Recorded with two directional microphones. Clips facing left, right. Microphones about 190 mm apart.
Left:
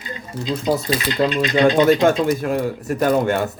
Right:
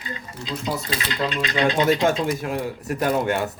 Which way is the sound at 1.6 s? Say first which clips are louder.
Left 5 dB; 45° left (ahead or behind).